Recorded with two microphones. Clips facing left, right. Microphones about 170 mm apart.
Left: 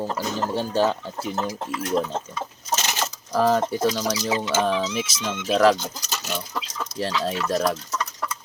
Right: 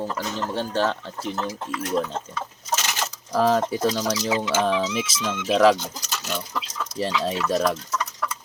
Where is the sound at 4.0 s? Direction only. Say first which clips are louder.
Right 1 dB; 10° left (ahead or behind).